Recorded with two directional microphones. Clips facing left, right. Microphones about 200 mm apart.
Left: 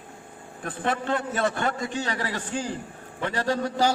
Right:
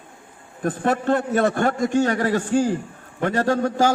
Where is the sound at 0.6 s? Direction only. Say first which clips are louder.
Right 7 dB; 45° right (ahead or behind).